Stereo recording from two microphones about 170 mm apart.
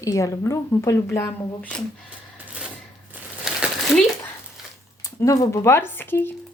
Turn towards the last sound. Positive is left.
turn(degrees=10)  # may be behind; listen again after turning